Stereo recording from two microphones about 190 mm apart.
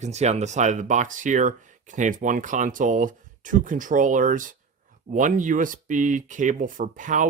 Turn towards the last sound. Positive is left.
turn(degrees=-45)  # may be behind; listen again after turning